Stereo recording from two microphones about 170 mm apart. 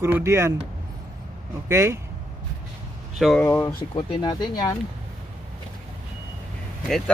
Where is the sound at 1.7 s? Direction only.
15° right (ahead or behind).